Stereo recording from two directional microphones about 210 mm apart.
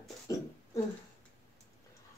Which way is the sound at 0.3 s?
15° left (ahead or behind).